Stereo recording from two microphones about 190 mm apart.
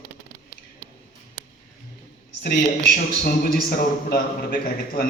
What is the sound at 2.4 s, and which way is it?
A man's voice, 55° left (ahead or behind).